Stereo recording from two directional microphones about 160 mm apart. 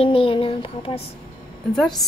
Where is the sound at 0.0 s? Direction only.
35° left (ahead or behind).